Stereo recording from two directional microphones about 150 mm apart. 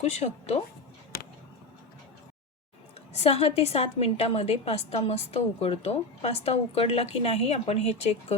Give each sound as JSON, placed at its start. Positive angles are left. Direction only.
{"t": 0.0, "sound": "a woman's voice", "side_deg": 45}
{"t": 3.2, "sound": "a woman's voice", "side_deg": 40}